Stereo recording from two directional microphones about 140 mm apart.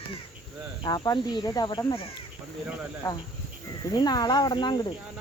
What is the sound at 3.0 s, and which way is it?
Speech, 25° left (ahead or behind).